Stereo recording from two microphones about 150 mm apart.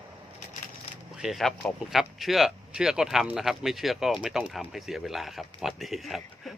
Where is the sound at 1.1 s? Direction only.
Centre (ahead or behind).